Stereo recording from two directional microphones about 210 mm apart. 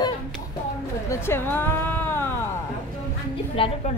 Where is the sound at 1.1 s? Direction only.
10° left (ahead or behind).